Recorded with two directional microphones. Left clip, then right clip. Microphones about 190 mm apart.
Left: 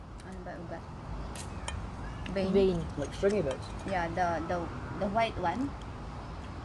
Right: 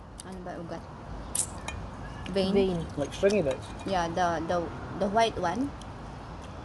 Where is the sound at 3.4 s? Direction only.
35° right (ahead or behind).